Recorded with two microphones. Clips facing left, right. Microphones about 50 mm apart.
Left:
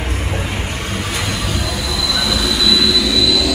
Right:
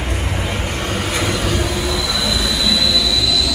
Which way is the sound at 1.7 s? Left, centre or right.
Right.